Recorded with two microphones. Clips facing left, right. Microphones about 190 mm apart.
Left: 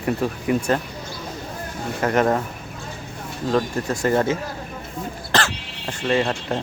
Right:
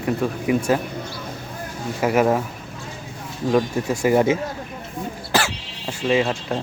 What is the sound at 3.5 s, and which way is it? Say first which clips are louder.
Speech: right 2 dB; 10° right (ahead or behind).